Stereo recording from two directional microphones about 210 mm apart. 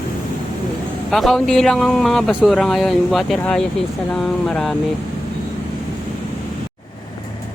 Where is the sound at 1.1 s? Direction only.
Centre (ahead or behind).